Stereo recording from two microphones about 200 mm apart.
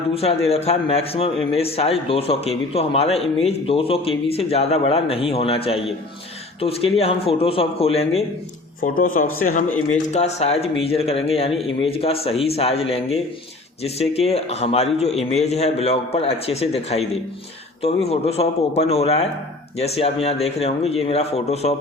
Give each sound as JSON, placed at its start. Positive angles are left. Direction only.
{"t": 0.1, "sound": "a man's voice", "side_deg": 30}
{"t": 8.8, "sound": "a man's voice", "side_deg": 45}